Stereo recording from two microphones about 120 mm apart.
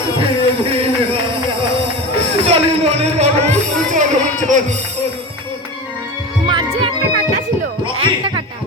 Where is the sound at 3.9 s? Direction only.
90° right.